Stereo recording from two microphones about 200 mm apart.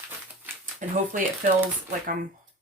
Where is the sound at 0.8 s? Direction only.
40° right (ahead or behind).